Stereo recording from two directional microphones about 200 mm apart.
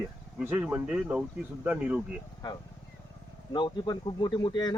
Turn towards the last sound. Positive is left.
turn(degrees=20)  # may be behind; listen again after turning